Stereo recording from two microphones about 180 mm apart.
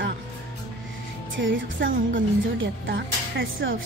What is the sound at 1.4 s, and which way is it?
Speech, 90° right.